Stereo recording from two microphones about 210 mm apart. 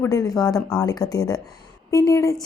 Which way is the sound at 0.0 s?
15° left (ahead or behind).